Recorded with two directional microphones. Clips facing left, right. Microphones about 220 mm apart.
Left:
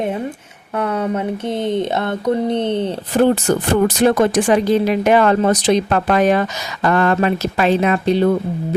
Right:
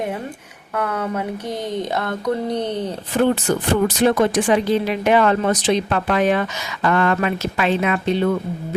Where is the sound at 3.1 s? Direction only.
45° left (ahead or behind).